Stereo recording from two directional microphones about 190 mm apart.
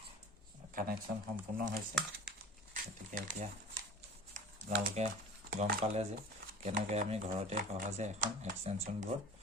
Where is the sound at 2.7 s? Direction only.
45° right (ahead or behind).